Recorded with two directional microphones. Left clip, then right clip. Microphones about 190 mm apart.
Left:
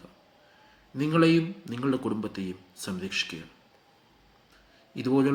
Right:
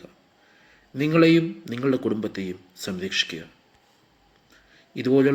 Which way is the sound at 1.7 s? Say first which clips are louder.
Right 5 dB; 10° right (ahead or behind).